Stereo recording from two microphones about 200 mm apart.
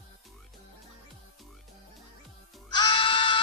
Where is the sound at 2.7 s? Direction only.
25° left (ahead or behind).